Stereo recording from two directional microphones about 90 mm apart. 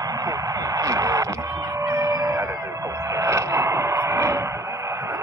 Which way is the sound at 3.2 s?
35° right (ahead or behind).